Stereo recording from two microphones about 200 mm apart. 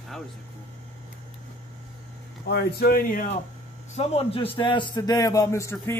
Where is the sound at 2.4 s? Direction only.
55° left (ahead or behind).